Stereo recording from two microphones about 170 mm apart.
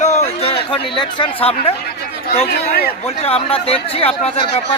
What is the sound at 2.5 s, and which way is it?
Speech, 70° left (ahead or behind).